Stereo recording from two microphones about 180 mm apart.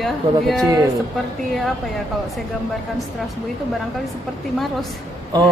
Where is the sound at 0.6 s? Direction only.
20° right (ahead or behind).